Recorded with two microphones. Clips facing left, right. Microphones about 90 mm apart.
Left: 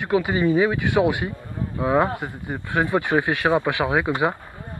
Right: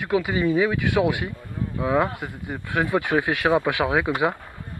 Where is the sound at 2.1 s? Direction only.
35° left (ahead or behind).